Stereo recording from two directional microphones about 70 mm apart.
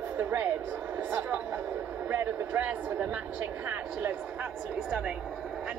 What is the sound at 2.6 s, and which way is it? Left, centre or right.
Speech, centre.